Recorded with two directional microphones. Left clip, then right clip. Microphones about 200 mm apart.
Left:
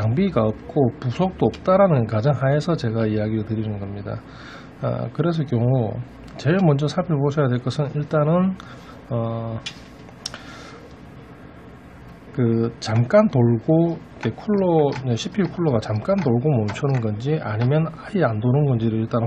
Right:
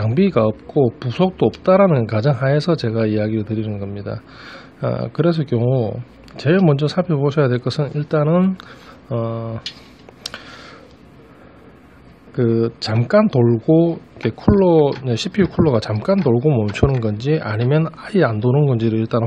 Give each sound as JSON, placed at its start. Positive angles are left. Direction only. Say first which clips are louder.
{"t": 0.0, "sound": "speech", "louder": "right 5 dB", "side_deg": -40}
{"t": 10.3, "sound": "a sound", "louder": "right 3 dB", "side_deg": -40}
{"t": 12.4, "sound": "speech", "louder": "right 4 dB", "side_deg": -35}